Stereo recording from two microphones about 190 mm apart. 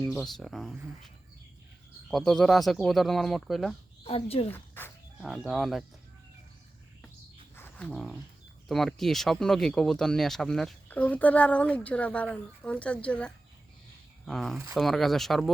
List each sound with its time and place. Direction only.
0.0 s speech: centre (ahead or behind)
4.0 s a woman's voice: 30° left (ahead or behind)
4.5 s speech: 10° left (ahead or behind)
5.2 s speech: centre (ahead or behind)
7.5 s bird: 10° left (ahead or behind)
8.6 s speech: centre (ahead or behind)